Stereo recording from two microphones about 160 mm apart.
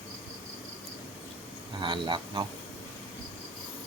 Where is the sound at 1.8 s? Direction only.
30° right (ahead or behind).